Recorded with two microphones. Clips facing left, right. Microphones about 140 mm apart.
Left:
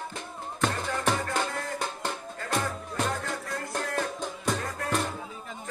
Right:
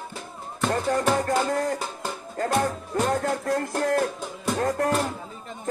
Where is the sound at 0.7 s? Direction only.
45° right (ahead or behind).